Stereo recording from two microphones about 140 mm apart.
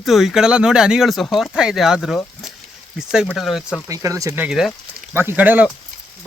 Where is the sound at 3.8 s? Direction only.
20° right (ahead or behind).